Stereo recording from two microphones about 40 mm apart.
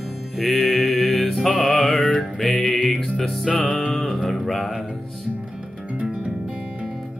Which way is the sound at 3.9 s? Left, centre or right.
Centre.